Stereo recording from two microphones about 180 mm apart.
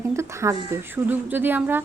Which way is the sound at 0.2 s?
15° right (ahead or behind).